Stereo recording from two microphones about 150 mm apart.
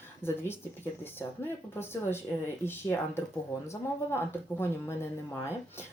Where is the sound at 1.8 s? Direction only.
15° left (ahead or behind).